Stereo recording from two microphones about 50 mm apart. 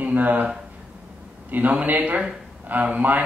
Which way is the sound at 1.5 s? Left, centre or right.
Right.